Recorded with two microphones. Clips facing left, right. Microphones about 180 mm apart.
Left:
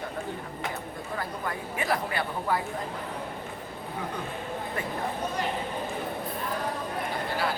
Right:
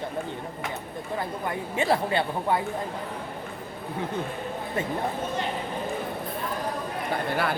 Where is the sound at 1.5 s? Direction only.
25° right (ahead or behind).